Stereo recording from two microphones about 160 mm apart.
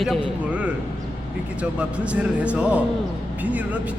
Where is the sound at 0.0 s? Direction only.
5° right (ahead or behind).